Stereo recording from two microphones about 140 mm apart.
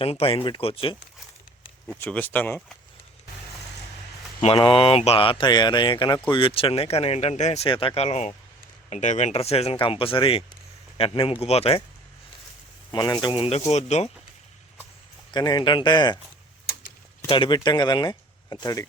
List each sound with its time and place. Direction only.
0.0 s speech: 45° left (ahead or behind)
2.0 s speech: 10° left (ahead or behind)
4.4 s speech: 35° left (ahead or behind); by 7.7 s 55° left (ahead or behind)
7.7 s speech: 40° left (ahead or behind)
12.9 s speech: 30° left (ahead or behind)
13.5 s speech: 50° left (ahead or behind)
15.3 s speech: 30° left (ahead or behind)
17.2 s speech: 35° left (ahead or behind)